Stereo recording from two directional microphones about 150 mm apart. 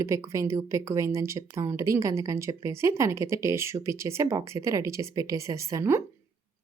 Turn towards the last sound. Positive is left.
turn(degrees=-20)  # may be behind; listen again after turning